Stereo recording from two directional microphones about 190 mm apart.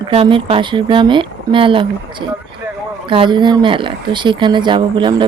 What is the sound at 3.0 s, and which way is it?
Speech, 25° right (ahead or behind).